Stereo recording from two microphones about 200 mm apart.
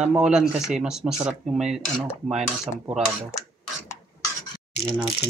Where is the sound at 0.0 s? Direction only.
5° right (ahead or behind).